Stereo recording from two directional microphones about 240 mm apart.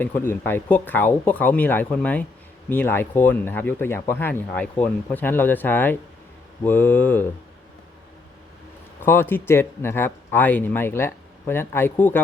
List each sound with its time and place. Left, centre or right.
0.0 s speech: centre
9.0 s speech: centre